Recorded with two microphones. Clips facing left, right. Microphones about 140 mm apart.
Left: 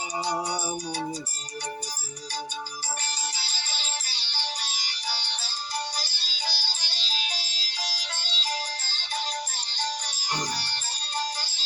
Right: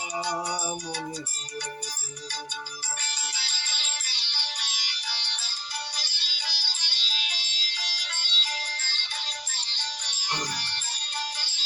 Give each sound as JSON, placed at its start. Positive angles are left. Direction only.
{"t": 0.4, "sound": "music", "side_deg": 35}
{"t": 3.3, "sound": "music", "side_deg": 35}